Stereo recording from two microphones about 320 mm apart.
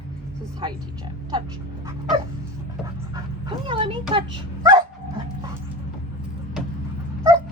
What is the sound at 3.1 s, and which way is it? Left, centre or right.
Dog, centre.